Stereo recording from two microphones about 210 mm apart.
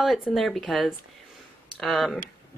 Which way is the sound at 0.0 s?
Centre (ahead or behind).